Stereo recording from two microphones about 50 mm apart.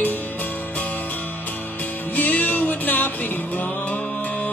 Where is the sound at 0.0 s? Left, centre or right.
Left.